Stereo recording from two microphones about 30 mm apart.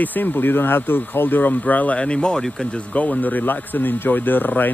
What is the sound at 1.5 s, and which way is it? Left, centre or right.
Speech, left.